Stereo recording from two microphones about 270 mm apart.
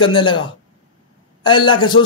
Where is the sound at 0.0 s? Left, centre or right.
Centre.